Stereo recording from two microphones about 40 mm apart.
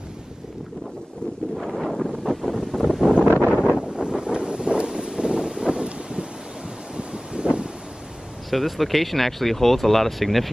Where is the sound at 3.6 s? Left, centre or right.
Right.